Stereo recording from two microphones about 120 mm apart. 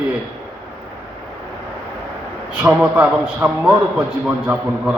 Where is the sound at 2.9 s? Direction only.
10° right (ahead or behind).